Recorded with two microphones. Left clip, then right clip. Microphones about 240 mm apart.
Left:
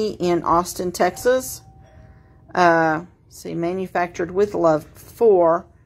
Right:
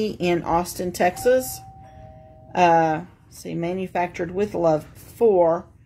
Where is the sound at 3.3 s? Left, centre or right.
Left.